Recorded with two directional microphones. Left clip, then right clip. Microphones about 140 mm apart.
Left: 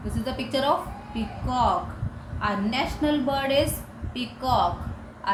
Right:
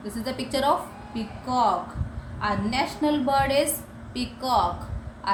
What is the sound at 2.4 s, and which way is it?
A woman's voice, 30° right (ahead or behind).